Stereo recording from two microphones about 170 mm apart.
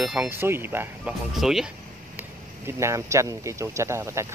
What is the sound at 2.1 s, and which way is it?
Speech, 15° right (ahead or behind).